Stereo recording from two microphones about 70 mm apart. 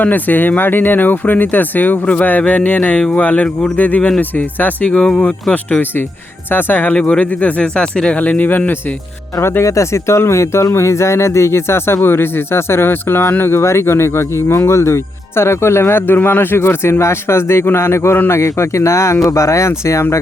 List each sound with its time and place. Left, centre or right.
0.0 s speech: left
6.5 s speech: left
9.4 s speech: left